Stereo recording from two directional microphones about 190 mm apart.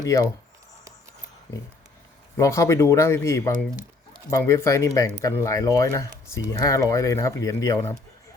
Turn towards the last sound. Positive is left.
turn(degrees=15)  # may be behind; listen again after turning